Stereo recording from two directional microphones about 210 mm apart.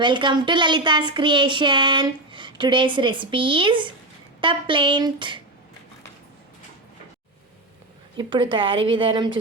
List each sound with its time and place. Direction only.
0.0 s speech: 20° right (ahead or behind)
8.1 s speech: 20° right (ahead or behind)